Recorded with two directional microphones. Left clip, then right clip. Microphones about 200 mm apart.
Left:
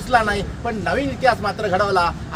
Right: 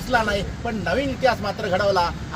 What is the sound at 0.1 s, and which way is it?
Speech, 5° left (ahead or behind).